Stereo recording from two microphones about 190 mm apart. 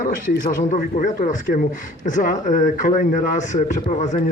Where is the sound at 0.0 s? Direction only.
45° left (ahead or behind).